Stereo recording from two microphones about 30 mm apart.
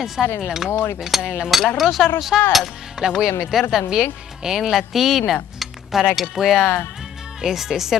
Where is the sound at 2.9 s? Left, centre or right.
Right.